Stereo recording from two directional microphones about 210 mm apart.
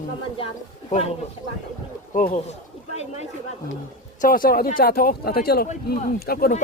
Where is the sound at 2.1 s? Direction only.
40° left (ahead or behind).